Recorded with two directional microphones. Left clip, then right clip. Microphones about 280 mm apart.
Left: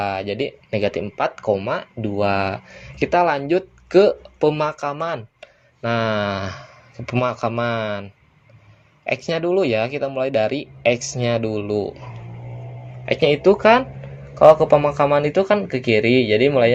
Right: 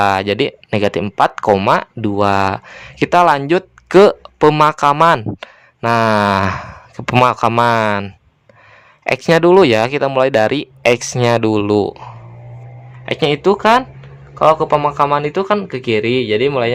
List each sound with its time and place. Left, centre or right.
0.0 s speech: right
5.8 s speech: centre
13.1 s a man's voice: centre